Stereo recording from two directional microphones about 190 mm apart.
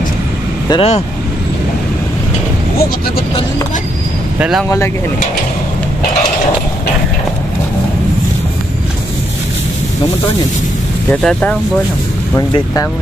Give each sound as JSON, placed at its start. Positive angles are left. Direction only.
{"t": 0.7, "sound": "speech", "side_deg": 30}
{"t": 4.4, "sound": "speech", "side_deg": -5}
{"t": 4.6, "sound": "speech", "side_deg": 15}
{"t": 11.1, "sound": "speech", "side_deg": 5}
{"t": 12.4, "sound": "speech", "side_deg": 20}